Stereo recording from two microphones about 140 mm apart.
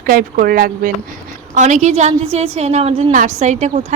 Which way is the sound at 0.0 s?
90° right.